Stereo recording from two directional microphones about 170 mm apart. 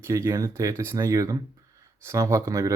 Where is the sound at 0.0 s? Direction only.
15° right (ahead or behind).